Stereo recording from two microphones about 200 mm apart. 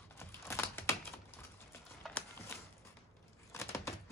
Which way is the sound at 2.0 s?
10° left (ahead or behind).